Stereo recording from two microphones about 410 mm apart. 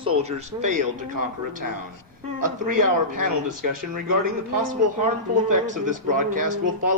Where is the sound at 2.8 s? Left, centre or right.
Right.